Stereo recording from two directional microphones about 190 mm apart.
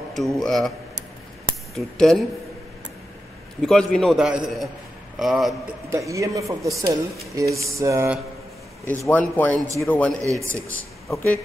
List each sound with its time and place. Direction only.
0.4 s a man's voice: centre (ahead or behind)
1.8 s a man's voice: centre (ahead or behind)
3.6 s a man's voice: centre (ahead or behind)
5.9 s speech: 15° right (ahead or behind)
8.8 s speech: 10° left (ahead or behind)
10.2 s speech: 15° right (ahead or behind)
10.5 s speech: 10° left (ahead or behind)